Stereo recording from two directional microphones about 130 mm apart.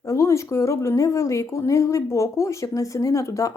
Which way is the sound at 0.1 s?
25° left (ahead or behind).